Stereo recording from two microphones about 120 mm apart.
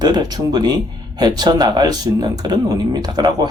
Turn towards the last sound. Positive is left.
turn(degrees=-35)  # may be behind; listen again after turning